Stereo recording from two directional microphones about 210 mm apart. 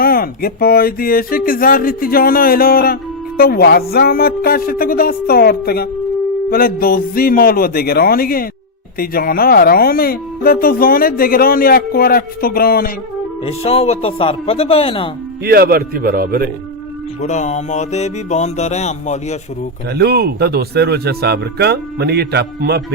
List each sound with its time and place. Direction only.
0.0 s speech: 45° left (ahead or behind)
13.4 s speech: 30° left (ahead or behind)
15.4 s speech: 45° right (ahead or behind)
17.2 s music: 35° left (ahead or behind)
19.9 s speech: 50° right (ahead or behind)